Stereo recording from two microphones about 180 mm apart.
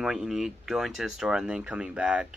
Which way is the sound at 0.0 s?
5° right (ahead or behind).